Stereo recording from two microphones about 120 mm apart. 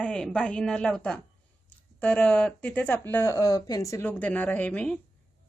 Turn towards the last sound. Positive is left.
turn(degrees=10)  # may be behind; listen again after turning